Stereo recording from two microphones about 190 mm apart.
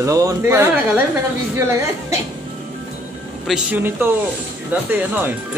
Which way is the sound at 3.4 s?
5° right (ahead or behind).